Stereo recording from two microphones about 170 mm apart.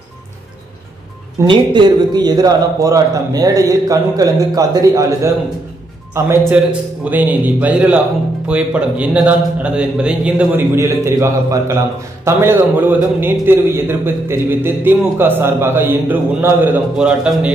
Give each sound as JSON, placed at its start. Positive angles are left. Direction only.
{"t": 1.4, "sound": "a man's voice", "side_deg": -25}
{"t": 10.8, "sound": "a man's voice", "side_deg": -20}